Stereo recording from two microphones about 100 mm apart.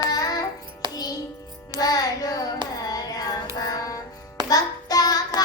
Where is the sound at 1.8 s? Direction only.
40° left (ahead or behind).